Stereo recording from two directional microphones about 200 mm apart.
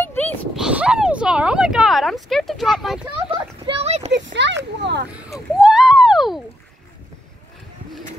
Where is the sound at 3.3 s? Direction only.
30° right (ahead or behind).